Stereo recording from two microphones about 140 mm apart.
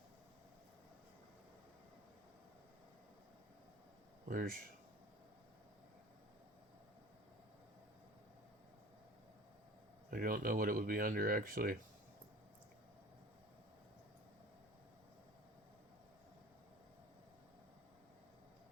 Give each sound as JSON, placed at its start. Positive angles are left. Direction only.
{"t": 4.3, "sound": "speech", "side_deg": -75}
{"t": 10.1, "sound": "speech", "side_deg": -90}